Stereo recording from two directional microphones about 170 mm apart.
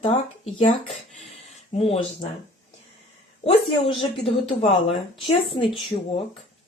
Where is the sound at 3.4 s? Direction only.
35° left (ahead or behind).